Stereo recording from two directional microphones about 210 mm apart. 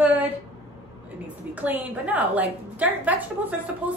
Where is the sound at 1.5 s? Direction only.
10° right (ahead or behind).